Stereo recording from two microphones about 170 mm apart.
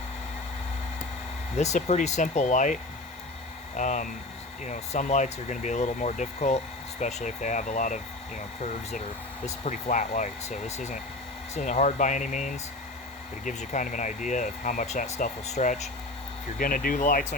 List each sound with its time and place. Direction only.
1.5 s speech: 40° left (ahead or behind)
3.8 s speech: 45° left (ahead or behind)
9.6 s speech: 45° left (ahead or behind)
16.6 s speech: 55° left (ahead or behind)